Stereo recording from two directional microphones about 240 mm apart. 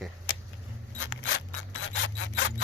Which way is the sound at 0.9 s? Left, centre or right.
Left.